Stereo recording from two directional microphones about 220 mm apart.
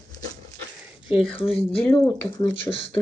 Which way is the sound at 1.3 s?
25° left (ahead or behind).